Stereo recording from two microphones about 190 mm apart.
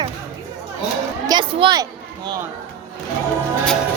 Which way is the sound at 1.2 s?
25° right (ahead or behind).